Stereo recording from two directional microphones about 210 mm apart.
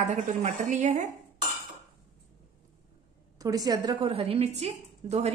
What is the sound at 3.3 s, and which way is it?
A woman's voice, 15° right (ahead or behind).